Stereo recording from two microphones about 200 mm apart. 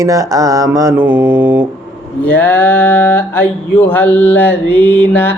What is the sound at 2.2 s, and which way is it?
Mantra, 10° left (ahead or behind).